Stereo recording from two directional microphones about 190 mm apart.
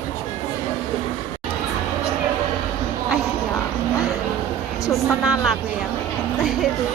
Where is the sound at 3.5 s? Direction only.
15° left (ahead or behind).